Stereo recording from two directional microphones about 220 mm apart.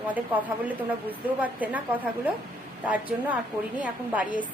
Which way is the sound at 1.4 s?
5° right (ahead or behind).